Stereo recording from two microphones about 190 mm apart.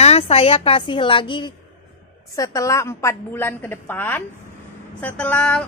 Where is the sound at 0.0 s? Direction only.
35° left (ahead or behind).